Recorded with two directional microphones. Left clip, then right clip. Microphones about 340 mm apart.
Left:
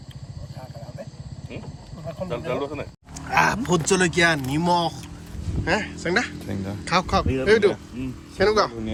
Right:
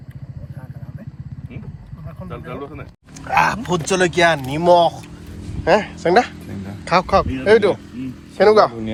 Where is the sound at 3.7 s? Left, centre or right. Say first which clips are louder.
Right 4 dB; centre.